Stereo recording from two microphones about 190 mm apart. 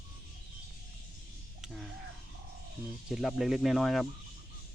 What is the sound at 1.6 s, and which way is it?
Speech, centre (ahead or behind).